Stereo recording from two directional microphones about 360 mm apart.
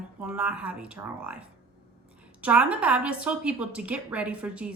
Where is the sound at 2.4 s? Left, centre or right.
Centre.